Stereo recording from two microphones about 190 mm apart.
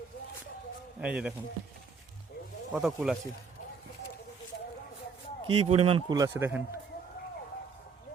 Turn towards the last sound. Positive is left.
turn(degrees=-15)  # may be behind; listen again after turning